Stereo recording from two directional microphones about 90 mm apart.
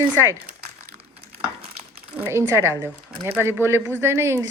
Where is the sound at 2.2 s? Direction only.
30° right (ahead or behind).